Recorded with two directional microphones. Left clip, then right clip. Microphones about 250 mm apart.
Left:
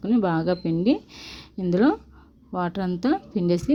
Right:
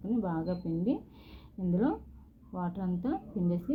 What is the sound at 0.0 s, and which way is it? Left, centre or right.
Speech, left.